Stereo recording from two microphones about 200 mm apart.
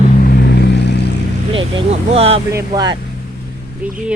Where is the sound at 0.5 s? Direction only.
60° left (ahead or behind).